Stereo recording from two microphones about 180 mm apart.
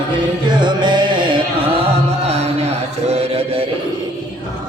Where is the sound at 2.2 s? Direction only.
35° right (ahead or behind).